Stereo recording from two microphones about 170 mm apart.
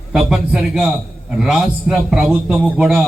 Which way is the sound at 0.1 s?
5° right (ahead or behind).